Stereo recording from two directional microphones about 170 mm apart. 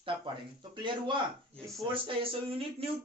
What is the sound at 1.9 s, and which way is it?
Speech, 30° right (ahead or behind).